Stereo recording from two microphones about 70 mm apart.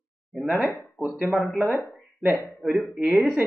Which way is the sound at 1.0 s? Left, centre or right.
Centre.